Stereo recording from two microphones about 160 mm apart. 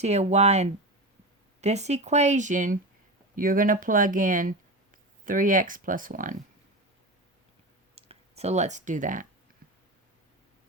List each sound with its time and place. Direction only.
0.0 s speech: 45° right (ahead or behind)
7.9 s speech: 40° right (ahead or behind)